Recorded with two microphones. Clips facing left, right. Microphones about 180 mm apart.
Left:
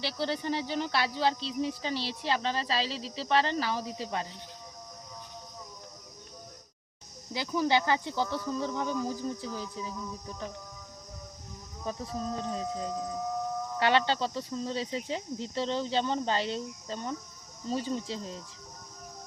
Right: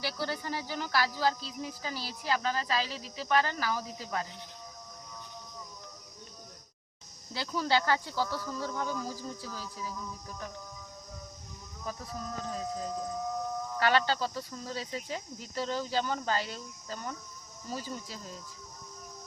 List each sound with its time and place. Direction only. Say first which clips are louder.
0.0 s speech: left 3 dB; 25° left (ahead or behind)
7.3 s speech: left 2 dB; 15° left (ahead or behind)
11.9 s speech: left 5 dB; 25° left (ahead or behind)
13.7 s speech: left 1 dB; 25° left (ahead or behind)